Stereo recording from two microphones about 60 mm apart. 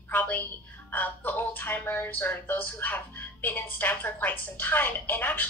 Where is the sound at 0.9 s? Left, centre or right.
Left.